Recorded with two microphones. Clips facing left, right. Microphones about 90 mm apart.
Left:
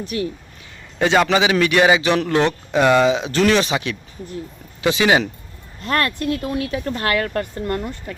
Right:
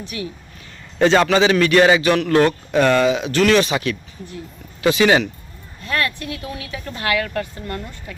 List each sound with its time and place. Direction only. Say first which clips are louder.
0.9 s a man's voice: right 2 dB; 5° left (ahead or behind)
2.0 s speech: right 2 dB; 25° left (ahead or behind)
5.8 s speech: left 3 dB; 50° left (ahead or behind)